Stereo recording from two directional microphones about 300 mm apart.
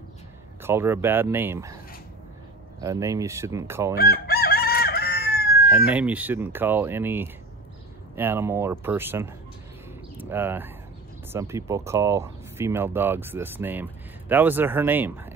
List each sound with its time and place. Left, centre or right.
0.6 s speech: centre
2.8 s speech: centre
4.0 s chicken: left
5.7 s speech: centre
10.3 s speech: centre